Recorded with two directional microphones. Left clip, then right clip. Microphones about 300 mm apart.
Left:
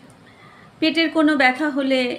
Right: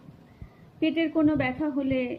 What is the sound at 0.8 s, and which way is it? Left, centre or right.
A woman's voice, centre.